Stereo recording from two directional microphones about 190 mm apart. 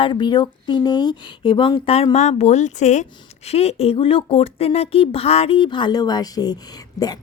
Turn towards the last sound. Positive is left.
turn(degrees=20)  # may be behind; listen again after turning